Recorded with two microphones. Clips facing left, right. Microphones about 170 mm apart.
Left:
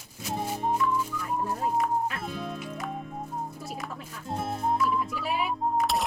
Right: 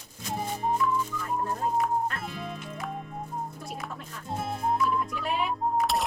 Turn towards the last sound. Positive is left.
turn(degrees=0)  # may be behind; listen again after turning